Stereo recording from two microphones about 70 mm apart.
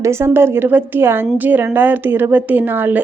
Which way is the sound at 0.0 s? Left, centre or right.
Right.